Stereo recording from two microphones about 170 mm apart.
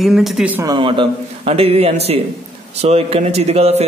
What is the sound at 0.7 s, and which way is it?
A man's voice, 30° right (ahead or behind).